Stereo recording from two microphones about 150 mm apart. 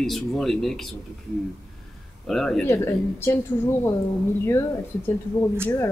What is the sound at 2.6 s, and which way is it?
Speech, 15° left (ahead or behind).